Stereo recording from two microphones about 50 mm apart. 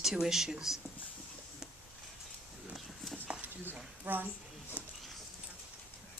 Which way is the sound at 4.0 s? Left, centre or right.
Right.